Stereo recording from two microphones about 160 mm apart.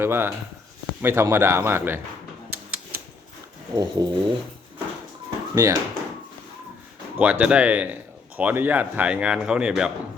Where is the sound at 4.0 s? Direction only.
25° right (ahead or behind).